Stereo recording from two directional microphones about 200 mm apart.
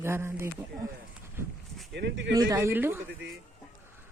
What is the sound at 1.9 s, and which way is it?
Speech, 60° right (ahead or behind).